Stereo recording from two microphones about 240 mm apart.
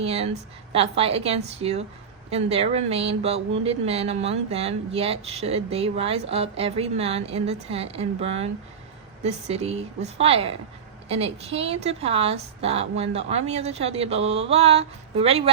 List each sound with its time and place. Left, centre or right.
0.0 s speech: right